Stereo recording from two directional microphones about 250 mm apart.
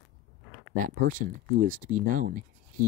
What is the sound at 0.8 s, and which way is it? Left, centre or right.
Speech, right.